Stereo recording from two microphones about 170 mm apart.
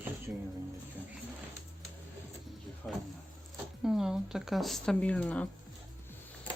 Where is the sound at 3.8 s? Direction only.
Centre (ahead or behind).